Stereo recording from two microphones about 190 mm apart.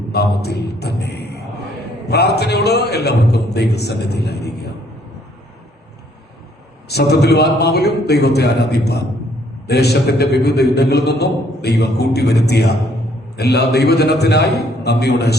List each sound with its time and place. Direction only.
0.1 s a sound: 60° left (ahead or behind)
2.0 s a man's voice: 60° left (ahead or behind)
6.8 s a man's voice: 60° left (ahead or behind)